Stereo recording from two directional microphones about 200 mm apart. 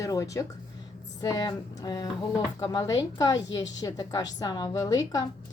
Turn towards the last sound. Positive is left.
turn(degrees=20)  # may be behind; listen again after turning